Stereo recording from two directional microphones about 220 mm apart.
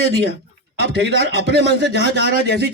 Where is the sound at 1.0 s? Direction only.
50° right (ahead or behind).